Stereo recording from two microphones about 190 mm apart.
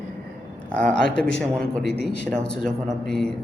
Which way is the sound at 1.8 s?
60° left (ahead or behind).